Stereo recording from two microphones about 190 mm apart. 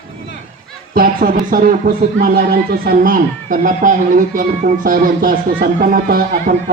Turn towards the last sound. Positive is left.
turn(degrees=-45)  # may be behind; listen again after turning